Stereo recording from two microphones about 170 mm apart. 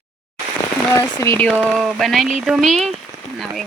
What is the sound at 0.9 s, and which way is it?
Speech, 15° left (ahead or behind).